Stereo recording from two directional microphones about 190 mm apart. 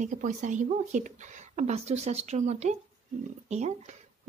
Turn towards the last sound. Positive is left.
turn(degrees=-35)  # may be behind; listen again after turning